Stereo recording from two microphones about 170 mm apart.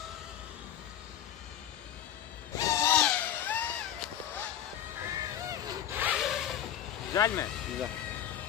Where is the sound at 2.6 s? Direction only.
20° left (ahead or behind).